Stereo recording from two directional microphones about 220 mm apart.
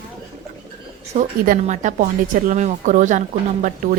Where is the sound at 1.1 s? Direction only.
35° right (ahead or behind).